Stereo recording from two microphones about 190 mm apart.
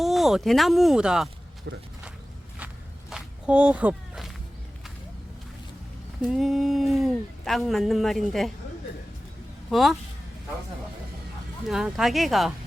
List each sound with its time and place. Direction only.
0.0 s speech: centre (ahead or behind)
1.7 s speech: 65° right (ahead or behind)
3.1 s a sound: 5° right (ahead or behind)
6.2 s speech: centre (ahead or behind)
9.6 s speech: centre (ahead or behind)
11.7 s speech: centre (ahead or behind)